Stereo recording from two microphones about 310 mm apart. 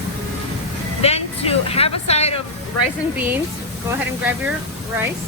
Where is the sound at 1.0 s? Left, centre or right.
Centre.